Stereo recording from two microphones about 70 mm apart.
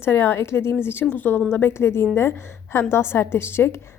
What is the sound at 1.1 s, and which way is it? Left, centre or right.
A woman's voice, left.